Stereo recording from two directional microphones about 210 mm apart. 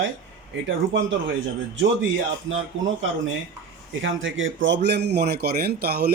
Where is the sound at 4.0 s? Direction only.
65° right (ahead or behind).